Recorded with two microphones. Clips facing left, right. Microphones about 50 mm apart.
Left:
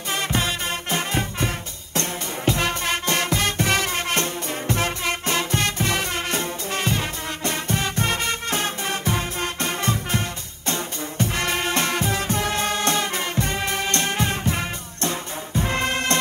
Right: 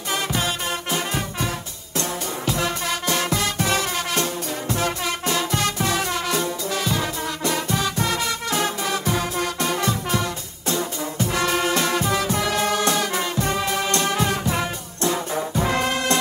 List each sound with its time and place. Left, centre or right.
0.1 s music: left
15.3 s music: right
15.7 s music: left